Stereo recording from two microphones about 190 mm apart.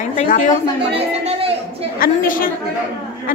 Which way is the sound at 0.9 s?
30° right (ahead or behind).